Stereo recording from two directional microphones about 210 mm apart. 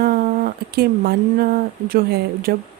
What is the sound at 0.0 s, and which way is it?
Speech, 45° right (ahead or behind).